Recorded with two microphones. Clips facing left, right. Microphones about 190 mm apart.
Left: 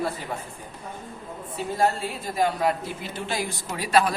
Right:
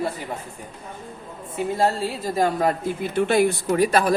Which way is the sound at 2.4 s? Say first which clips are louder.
Right 2 dB; 45° right (ahead or behind).